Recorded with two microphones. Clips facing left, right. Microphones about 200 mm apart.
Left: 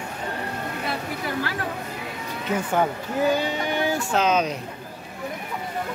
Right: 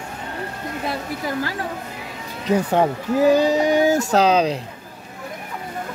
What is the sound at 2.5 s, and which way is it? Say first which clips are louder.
Speech: right 5 dB; 30° right (ahead or behind).